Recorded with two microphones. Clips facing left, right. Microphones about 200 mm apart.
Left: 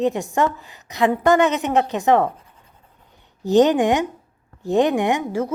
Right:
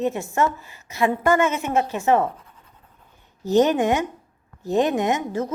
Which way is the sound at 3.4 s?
15° left (ahead or behind).